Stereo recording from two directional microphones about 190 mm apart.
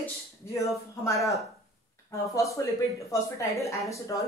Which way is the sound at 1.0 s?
15° left (ahead or behind).